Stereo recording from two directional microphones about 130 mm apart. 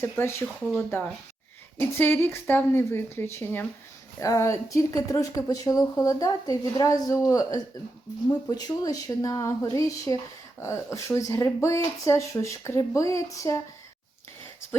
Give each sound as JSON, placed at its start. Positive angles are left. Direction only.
{"t": 0.0, "sound": "a woman's voice", "side_deg": 20}
{"t": 0.4, "sound": "speech", "side_deg": 0}
{"t": 1.8, "sound": "a woman's voice", "side_deg": 15}